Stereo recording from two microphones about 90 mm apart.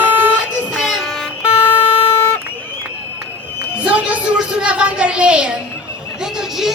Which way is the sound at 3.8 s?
15° right (ahead or behind).